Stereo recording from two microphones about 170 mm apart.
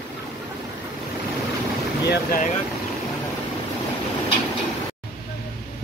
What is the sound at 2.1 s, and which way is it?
Speech, 55° left (ahead or behind).